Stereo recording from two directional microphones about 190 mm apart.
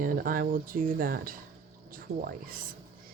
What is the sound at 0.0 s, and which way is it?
Speech, 50° right (ahead or behind).